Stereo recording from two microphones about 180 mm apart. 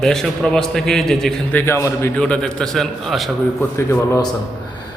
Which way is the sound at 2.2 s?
5° left (ahead or behind).